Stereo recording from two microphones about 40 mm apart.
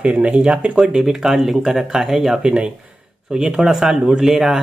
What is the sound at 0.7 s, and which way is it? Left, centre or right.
Speech, centre.